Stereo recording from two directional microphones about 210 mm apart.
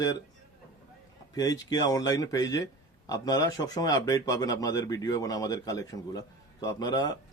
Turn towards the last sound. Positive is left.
turn(degrees=20)  # may be behind; listen again after turning